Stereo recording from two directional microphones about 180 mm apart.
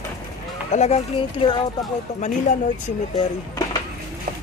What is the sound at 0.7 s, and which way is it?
Speech, 35° left (ahead or behind).